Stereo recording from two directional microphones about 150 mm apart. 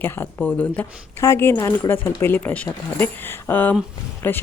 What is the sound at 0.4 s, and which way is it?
Speech, 10° left (ahead or behind).